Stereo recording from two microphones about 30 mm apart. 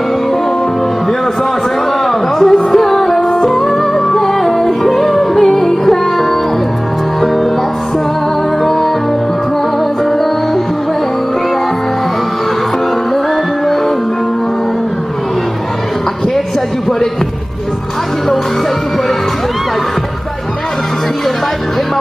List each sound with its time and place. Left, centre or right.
2.4 s music: centre